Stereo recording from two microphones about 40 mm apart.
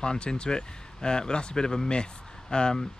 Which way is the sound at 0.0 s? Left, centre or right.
Left.